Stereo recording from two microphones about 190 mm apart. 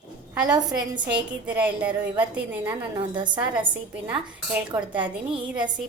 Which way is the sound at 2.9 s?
25° right (ahead or behind).